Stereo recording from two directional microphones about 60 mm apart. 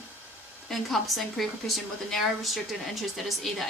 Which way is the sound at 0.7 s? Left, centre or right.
Centre.